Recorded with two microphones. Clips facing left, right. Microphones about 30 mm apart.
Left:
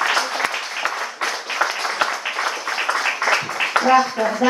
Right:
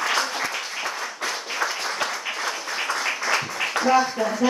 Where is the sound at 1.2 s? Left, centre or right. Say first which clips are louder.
Left 4 dB; left.